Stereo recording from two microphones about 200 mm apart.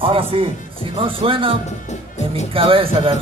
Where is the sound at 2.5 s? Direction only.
25° right (ahead or behind).